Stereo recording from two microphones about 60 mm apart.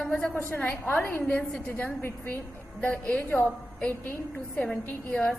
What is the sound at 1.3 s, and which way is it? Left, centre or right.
Speech, centre.